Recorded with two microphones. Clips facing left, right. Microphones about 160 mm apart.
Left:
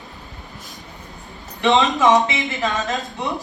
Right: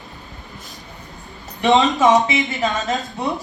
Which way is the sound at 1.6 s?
Centre (ahead or behind).